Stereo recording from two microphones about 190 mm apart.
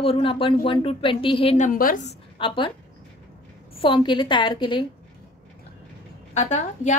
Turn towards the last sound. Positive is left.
turn(degrees=40)  # may be behind; listen again after turning